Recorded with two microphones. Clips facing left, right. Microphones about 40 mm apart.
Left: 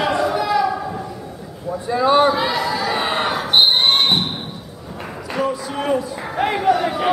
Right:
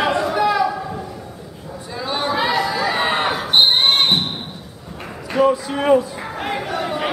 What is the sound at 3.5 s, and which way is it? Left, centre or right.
Basketball bounce, centre.